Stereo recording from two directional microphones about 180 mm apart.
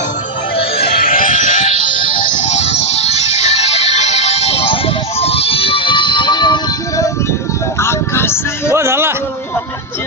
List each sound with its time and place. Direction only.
0.8 s music: 55° left (ahead or behind); by 8.7 s 15° left (ahead or behind)
8.7 s music: 15° right (ahead or behind)